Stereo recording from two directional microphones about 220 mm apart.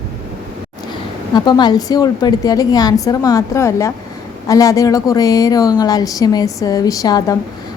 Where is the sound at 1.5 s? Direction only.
20° left (ahead or behind).